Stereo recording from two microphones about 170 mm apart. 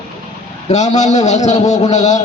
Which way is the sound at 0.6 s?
45° left (ahead or behind).